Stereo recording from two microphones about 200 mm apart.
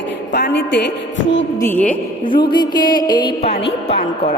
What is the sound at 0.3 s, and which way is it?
Speech, 55° left (ahead or behind).